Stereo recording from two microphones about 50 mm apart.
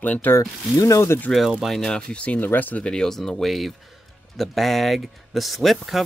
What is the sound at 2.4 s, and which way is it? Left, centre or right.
Speech, left.